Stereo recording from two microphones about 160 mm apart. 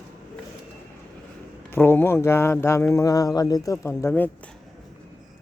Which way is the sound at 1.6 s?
15° left (ahead or behind).